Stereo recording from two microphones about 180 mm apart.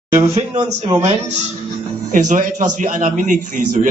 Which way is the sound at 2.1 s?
45° right (ahead or behind).